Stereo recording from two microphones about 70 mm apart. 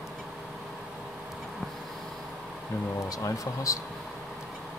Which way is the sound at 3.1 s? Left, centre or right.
Left.